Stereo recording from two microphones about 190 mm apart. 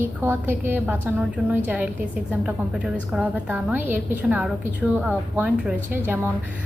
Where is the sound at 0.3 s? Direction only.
10° right (ahead or behind).